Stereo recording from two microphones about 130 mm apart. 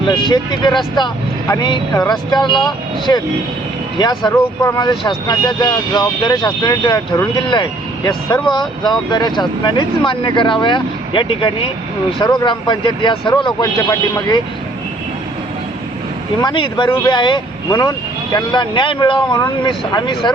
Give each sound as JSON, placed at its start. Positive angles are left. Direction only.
{"t": 0.0, "sound": "speech", "side_deg": 35}
{"t": 4.3, "sound": "speech", "side_deg": 30}
{"t": 12.2, "sound": "speech", "side_deg": 35}
{"t": 16.4, "sound": "speech", "side_deg": 35}